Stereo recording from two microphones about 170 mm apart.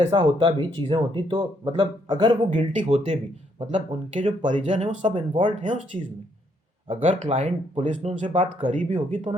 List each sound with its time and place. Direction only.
0.1 s speech: 30° right (ahead or behind)
2.7 s speech: 40° right (ahead or behind)
7.1 s speech: 30° right (ahead or behind)
7.3 s speech: 40° right (ahead or behind)